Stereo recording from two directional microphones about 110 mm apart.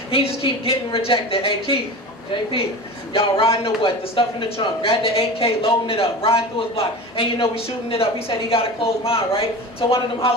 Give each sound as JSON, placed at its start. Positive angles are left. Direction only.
{"t": 0.1, "sound": "a man's voice", "side_deg": 55}
{"t": 3.1, "sound": "a man's voice", "side_deg": 55}